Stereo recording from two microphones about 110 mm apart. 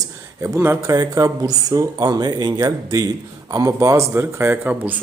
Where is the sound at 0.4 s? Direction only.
25° right (ahead or behind).